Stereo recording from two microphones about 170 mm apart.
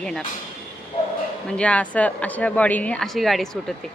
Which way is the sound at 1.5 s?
5° left (ahead or behind).